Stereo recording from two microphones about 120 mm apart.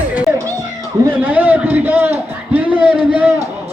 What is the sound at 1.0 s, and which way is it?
A man's voice, 15° right (ahead or behind).